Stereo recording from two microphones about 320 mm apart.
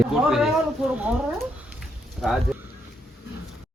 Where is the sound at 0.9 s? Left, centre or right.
Centre.